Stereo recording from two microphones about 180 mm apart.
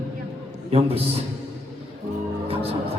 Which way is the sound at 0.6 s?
35° right (ahead or behind).